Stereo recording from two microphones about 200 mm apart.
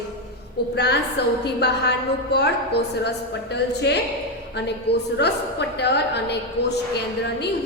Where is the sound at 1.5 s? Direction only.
55° left (ahead or behind).